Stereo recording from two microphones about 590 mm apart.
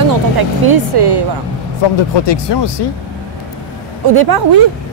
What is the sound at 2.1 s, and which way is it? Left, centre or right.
Speech, left.